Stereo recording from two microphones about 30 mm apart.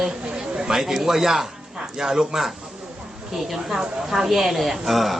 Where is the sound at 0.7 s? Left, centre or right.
Centre.